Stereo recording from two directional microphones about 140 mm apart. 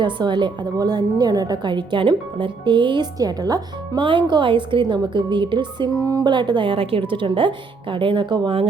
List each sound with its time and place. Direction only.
0.0 s a woman's voice: 35° right (ahead or behind)